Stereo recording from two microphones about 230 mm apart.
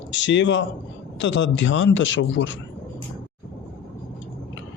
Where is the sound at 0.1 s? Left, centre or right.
Left.